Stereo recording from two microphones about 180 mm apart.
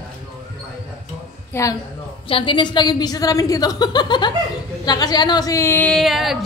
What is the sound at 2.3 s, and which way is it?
A woman's voice, 30° left (ahead or behind).